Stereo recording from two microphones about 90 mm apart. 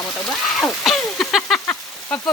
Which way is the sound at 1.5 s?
15° left (ahead or behind).